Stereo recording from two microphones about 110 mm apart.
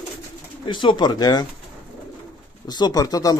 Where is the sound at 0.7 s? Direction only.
45° left (ahead or behind).